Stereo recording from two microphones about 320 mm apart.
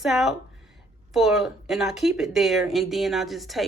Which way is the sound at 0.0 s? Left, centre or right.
Centre.